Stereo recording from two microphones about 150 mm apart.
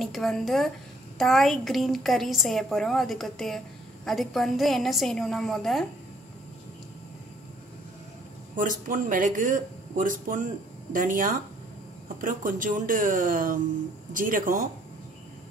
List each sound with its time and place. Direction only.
0.0 s a woman's voice: centre (ahead or behind)
8.5 s speech: 60° right (ahead or behind)